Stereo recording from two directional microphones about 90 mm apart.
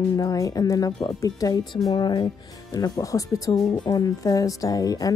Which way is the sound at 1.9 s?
55° left (ahead or behind).